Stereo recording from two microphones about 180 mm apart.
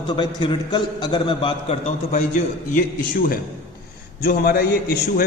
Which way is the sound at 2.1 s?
45° left (ahead or behind).